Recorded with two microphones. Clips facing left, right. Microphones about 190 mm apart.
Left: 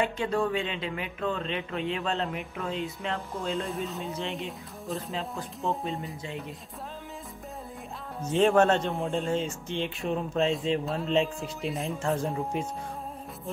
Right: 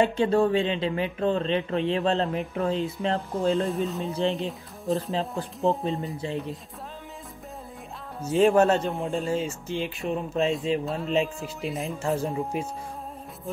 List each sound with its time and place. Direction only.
0.0 s speech: 30° right (ahead or behind)
3.6 s speech: centre (ahead or behind)
8.2 s speech: 5° right (ahead or behind)